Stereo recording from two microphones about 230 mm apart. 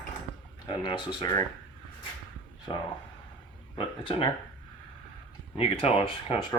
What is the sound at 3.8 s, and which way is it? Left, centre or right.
Speech, left.